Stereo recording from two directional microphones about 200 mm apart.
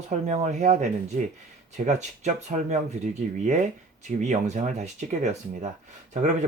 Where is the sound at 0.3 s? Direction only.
35° right (ahead or behind).